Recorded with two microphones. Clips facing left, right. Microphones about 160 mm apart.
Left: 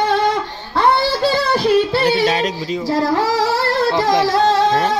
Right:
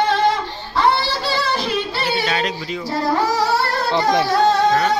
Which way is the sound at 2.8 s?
90° left.